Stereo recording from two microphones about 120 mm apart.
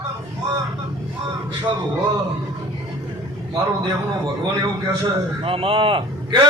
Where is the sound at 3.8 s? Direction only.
35° right (ahead or behind).